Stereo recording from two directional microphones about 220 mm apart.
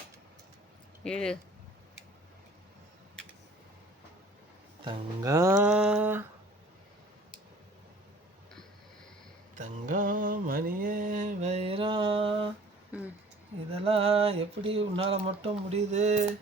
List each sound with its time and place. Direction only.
1.0 s speech: 5° left (ahead or behind)
4.9 s music: 15° right (ahead or behind)
9.6 s mantra: 35° right (ahead or behind)
13.7 s a sound: 25° right (ahead or behind)